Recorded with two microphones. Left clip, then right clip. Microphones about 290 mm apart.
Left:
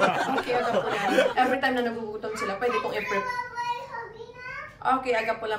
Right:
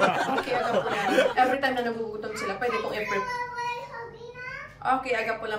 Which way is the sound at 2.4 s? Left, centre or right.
Centre.